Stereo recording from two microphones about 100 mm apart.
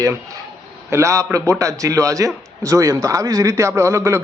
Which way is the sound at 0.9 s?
30° right (ahead or behind).